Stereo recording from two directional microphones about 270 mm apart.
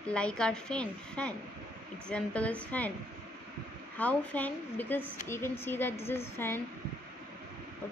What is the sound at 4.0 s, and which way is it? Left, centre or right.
A woman's voice, centre.